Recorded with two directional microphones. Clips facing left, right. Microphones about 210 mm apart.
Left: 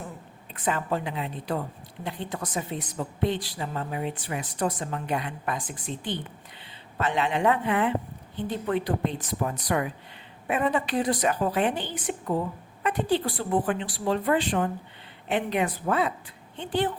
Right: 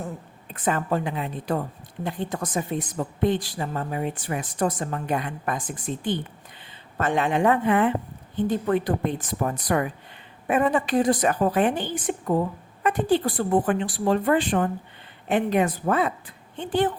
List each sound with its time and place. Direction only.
0.5 s a woman's voice: 45° right (ahead or behind)